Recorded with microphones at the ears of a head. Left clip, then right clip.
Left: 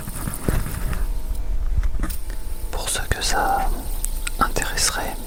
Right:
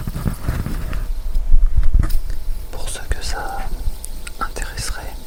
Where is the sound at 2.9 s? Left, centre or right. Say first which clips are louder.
Left 6 dB; left.